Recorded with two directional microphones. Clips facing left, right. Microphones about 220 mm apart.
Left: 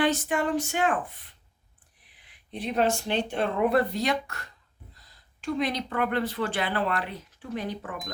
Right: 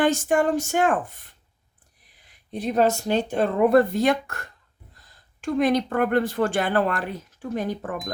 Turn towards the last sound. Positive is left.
turn(degrees=-45)  # may be behind; listen again after turning